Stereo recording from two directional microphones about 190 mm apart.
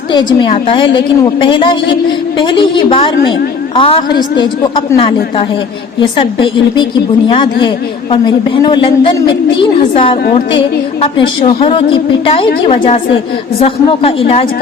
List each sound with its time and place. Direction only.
0.1 s a woman's voice: 25° left (ahead or behind)
11.2 s a woman's voice: 25° left (ahead or behind)